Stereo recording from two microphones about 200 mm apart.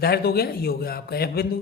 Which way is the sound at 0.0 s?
50° left (ahead or behind).